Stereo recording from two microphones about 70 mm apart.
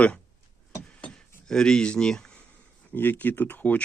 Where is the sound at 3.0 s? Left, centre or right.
Left.